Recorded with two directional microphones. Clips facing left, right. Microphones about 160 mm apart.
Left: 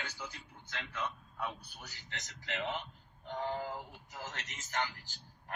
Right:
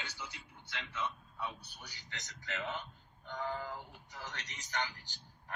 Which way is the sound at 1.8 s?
40° left (ahead or behind).